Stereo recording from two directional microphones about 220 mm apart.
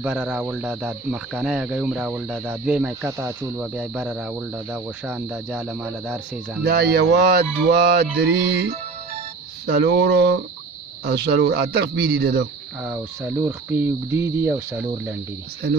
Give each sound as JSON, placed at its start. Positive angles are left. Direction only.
{"t": 0.0, "sound": "speech", "side_deg": -5}
{"t": 6.7, "sound": "mantra", "side_deg": -45}
{"t": 12.8, "sound": "cricket", "side_deg": -10}